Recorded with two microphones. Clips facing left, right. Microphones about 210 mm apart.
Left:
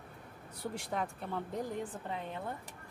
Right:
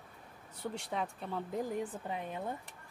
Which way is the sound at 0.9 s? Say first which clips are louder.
Left 1 dB; centre (ahead or behind).